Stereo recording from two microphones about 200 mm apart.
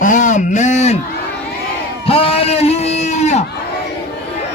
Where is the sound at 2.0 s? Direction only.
30° left (ahead or behind).